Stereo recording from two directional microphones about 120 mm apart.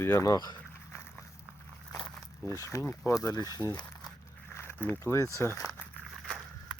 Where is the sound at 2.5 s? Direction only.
25° left (ahead or behind).